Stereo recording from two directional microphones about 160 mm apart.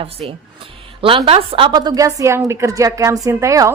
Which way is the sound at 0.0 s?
35° right (ahead or behind).